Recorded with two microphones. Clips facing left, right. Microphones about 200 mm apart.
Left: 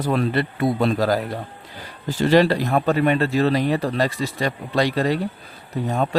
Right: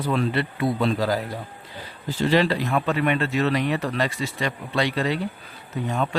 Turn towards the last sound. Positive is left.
turn(degrees=35)  # may be behind; listen again after turning